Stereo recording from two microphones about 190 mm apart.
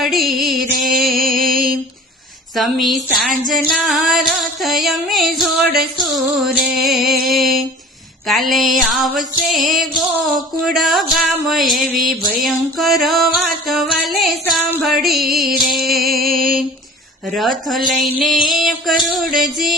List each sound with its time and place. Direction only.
0.0 s music: centre (ahead or behind)
1.1 s music: 50° right (ahead or behind)
2.6 s music: centre (ahead or behind)
8.3 s music: centre (ahead or behind)
17.3 s music: centre (ahead or behind)